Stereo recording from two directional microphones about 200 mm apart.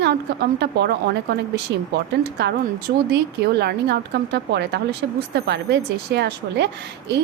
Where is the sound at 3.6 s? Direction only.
55° right (ahead or behind).